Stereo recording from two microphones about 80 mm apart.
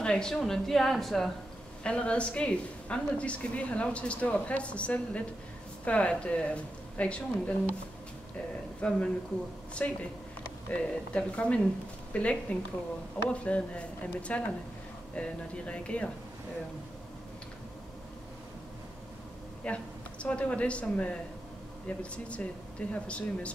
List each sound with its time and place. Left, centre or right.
0.0 s speech: centre
1.8 s a woman's voice: centre
8.8 s a woman's voice: centre
19.6 s a woman's voice: centre